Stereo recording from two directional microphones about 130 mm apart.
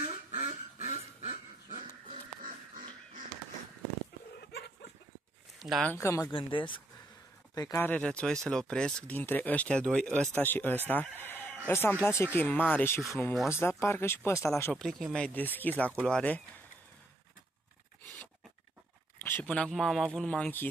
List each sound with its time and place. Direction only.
0.0 s dog: 45° right (ahead or behind)
5.6 s speech: centre (ahead or behind)
5.9 s speech: 20° left (ahead or behind)
6.3 s speech: 40° left (ahead or behind)
7.5 s speech: 30° left (ahead or behind)
7.8 s speech: 10° left (ahead or behind)
10.9 s crowing: 15° left (ahead or behind)
11.6 s speech: 15° left (ahead or behind)
14.6 s speech: 5° left (ahead or behind)
19.2 s speech: 10° left (ahead or behind)